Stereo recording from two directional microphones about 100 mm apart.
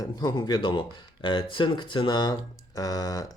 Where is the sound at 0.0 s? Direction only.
45° left (ahead or behind).